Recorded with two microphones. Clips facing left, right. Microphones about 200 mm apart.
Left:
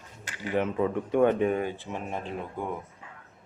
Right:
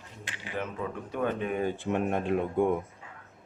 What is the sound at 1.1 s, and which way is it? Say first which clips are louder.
Speech: left 8 dB; 55° left (ahead or behind).